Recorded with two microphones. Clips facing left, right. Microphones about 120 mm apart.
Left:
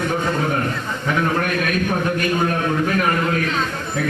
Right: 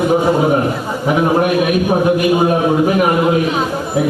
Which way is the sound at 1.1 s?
20° right (ahead or behind).